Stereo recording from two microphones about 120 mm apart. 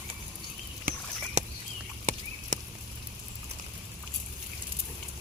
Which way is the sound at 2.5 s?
90° right.